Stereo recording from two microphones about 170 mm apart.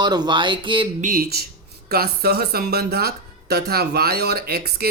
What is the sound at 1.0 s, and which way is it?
Speech, 60° right (ahead or behind).